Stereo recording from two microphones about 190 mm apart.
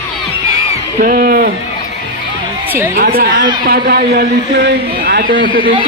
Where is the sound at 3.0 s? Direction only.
50° right (ahead or behind).